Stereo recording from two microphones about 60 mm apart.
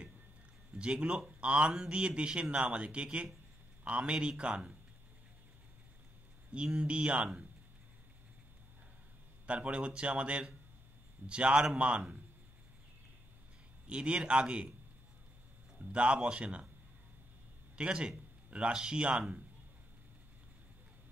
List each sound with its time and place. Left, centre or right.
0.7 s speech: centre
6.5 s speech: centre
9.5 s speech: right
13.8 s speech: centre
15.8 s speech: centre
17.7 s a man's voice: centre